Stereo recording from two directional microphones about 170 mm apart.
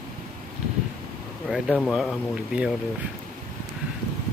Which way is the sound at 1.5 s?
Centre (ahead or behind).